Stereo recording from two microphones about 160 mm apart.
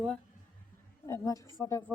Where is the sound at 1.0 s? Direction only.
20° left (ahead or behind).